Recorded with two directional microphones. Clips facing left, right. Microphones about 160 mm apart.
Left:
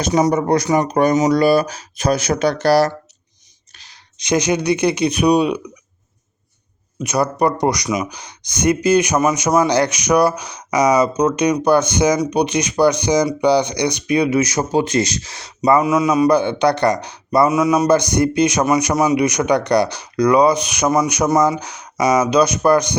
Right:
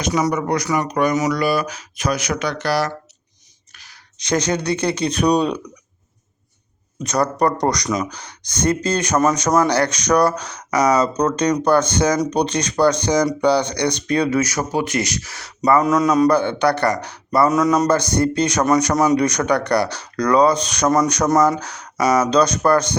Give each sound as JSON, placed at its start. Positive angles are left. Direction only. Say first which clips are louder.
{"t": 0.3, "sound": "speech", "louder": "left 4 dB", "side_deg": 30}
{"t": 3.8, "sound": "speech", "louder": "even", "side_deg": 15}
{"t": 7.0, "sound": "speech", "louder": "left 1 dB", "side_deg": 10}
{"t": 15.8, "sound": "speech", "louder": "even", "side_deg": 5}